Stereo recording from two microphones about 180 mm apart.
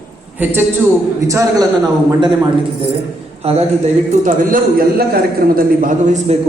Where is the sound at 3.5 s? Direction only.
35° right (ahead or behind).